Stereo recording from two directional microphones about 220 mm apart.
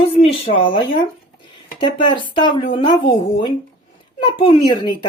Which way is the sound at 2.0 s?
20° left (ahead or behind).